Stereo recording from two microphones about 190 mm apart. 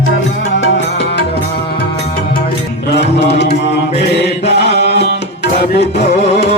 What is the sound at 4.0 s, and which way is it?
Mantra, 60° left (ahead or behind).